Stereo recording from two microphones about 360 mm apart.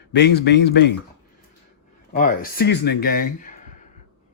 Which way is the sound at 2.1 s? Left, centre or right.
Left.